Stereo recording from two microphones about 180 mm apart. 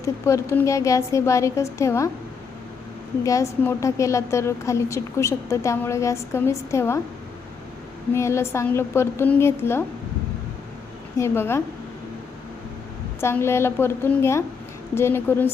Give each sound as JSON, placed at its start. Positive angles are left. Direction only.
{"t": 0.0, "sound": "a woman's voice", "side_deg": 15}
{"t": 3.2, "sound": "a woman's voice", "side_deg": 15}
{"t": 8.1, "sound": "a woman's voice", "side_deg": 15}
{"t": 11.2, "sound": "a woman's voice", "side_deg": 15}
{"t": 13.1, "sound": "a woman's voice", "side_deg": 15}